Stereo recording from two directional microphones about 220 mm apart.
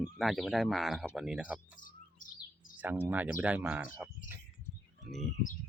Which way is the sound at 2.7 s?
5° right (ahead or behind).